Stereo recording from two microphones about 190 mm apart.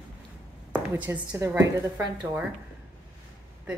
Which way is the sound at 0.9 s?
10° right (ahead or behind).